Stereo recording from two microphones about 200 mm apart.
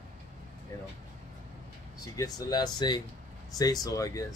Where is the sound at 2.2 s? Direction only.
20° left (ahead or behind).